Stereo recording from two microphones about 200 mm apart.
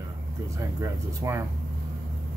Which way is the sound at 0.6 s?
15° right (ahead or behind).